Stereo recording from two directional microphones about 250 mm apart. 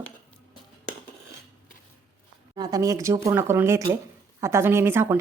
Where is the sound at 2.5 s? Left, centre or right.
Centre.